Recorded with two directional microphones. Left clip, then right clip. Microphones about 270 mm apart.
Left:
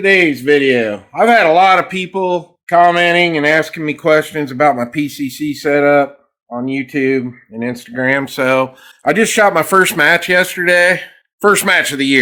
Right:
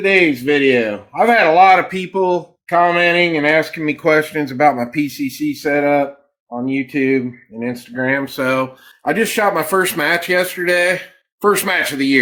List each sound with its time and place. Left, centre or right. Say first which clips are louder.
0.0 s speech: left 2 dB; left